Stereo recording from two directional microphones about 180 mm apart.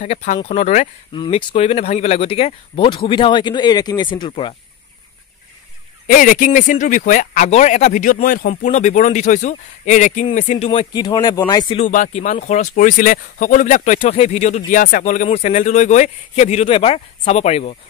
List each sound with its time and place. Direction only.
0.0 s speech: 40° left (ahead or behind)
1.1 s speech: 30° left (ahead or behind)
6.0 s speech: 45° left (ahead or behind); by 11.8 s 25° left (ahead or behind)
11.8 s speech: 45° left (ahead or behind)